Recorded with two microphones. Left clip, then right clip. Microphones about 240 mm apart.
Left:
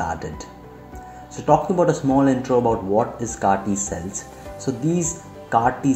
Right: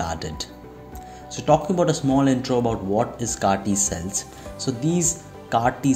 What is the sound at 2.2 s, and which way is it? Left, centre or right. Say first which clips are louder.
Speech: left 3 dB; right.